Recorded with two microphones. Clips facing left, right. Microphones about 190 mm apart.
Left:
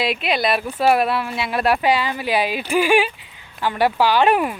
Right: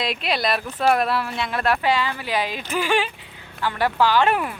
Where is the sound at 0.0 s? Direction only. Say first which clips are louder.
Left 3 dB; centre (ahead or behind).